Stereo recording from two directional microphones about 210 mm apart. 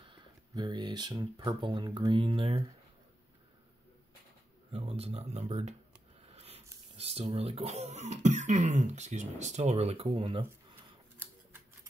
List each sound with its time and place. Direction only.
0.0 s speech: 20° right (ahead or behind)
4.7 s speech: 30° right (ahead or behind)
6.2 s a sound: 30° right (ahead or behind)
7.0 s speech: 30° right (ahead or behind)